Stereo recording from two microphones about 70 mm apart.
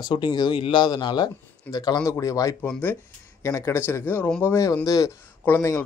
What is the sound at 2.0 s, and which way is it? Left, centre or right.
Speech, left.